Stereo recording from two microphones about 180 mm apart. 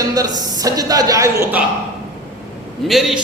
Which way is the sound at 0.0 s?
20° right (ahead or behind).